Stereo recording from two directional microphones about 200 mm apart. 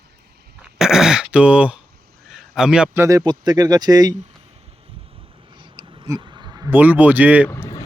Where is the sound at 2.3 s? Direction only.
Centre (ahead or behind); by 4.2 s 20° right (ahead or behind).